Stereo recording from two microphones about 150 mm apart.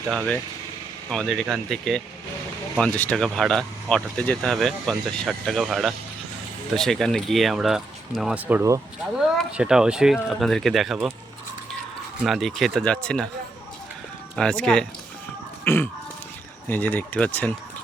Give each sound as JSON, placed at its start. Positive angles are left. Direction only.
{"t": 1.1, "sound": "speech", "side_deg": 0}
{"t": 8.4, "sound": "speech", "side_deg": -15}
{"t": 9.6, "sound": "speech", "side_deg": -5}
{"t": 12.2, "sound": "speech", "side_deg": 0}
{"t": 14.3, "sound": "speech", "side_deg": 5}
{"t": 15.6, "sound": "a sound", "side_deg": 15}
{"t": 16.6, "sound": "speech", "side_deg": 10}